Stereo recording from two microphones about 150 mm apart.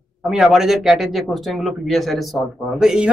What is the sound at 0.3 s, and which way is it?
Speech, 5° right (ahead or behind).